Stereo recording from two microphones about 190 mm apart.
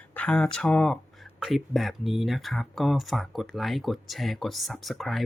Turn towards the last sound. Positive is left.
turn(degrees=0)  # may be behind; listen again after turning